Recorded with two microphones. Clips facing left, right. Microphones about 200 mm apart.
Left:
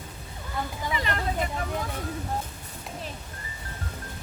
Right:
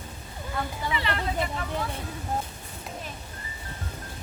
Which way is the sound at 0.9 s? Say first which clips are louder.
Even; 40° left (ahead or behind).